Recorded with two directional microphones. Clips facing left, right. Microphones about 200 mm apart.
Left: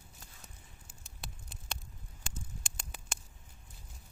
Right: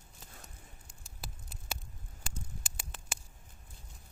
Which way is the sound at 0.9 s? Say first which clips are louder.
Right 1 dB; 5° right (ahead or behind).